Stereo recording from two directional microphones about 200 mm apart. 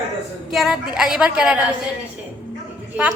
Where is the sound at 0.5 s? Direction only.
Centre (ahead or behind).